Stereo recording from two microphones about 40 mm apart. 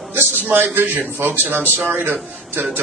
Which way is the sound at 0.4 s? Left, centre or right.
Right.